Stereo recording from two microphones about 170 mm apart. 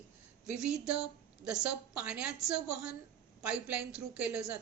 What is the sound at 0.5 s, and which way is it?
A woman's voice, 5° right (ahead or behind).